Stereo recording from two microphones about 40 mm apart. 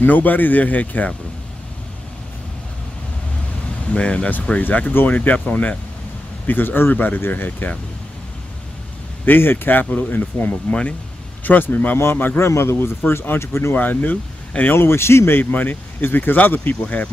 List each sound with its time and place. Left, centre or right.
0.0 s speech: left
3.9 s speech: left
4.9 s speech: left
6.4 s speech: left
9.2 s speech: left
10.7 s speech: left
11.4 s speech: left
12.0 s a man's voice: left
12.4 s speech: left
13.7 s speech: left
14.7 s speech: left